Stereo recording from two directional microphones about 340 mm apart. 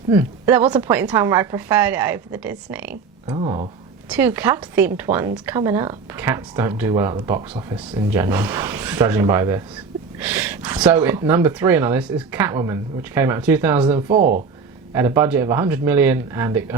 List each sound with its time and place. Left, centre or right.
0.1 s speech: centre
14.2 s speech: right
14.9 s speech: centre